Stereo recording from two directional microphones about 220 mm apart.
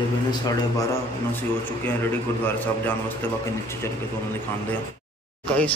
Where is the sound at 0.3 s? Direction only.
15° left (ahead or behind).